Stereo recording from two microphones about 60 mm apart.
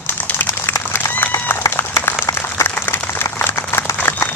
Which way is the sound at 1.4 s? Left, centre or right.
Left.